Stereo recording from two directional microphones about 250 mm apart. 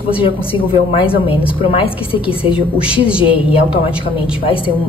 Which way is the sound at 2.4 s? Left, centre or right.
Centre.